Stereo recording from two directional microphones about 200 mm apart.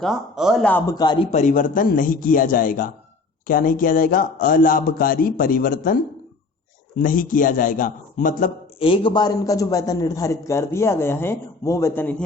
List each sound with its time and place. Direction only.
0.0 s speech: centre (ahead or behind)
0.7 s a man's voice: 20° left (ahead or behind)
1.3 s a man's voice: 40° left (ahead or behind)
8.8 s a man's voice: 25° left (ahead or behind)